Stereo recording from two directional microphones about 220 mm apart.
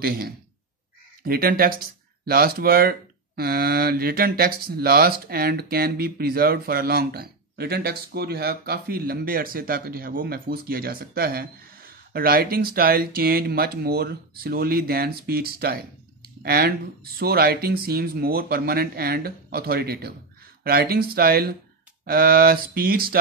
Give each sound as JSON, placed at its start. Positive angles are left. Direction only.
{"t": 0.0, "sound": "speech", "side_deg": -40}